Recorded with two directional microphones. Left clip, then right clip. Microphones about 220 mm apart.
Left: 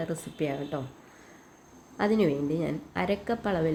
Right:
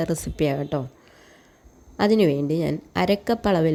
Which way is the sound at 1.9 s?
45° right (ahead or behind).